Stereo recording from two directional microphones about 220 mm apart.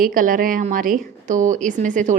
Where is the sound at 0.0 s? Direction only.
40° right (ahead or behind).